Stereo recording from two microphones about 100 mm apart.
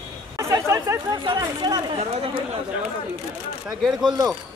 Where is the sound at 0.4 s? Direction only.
30° right (ahead or behind).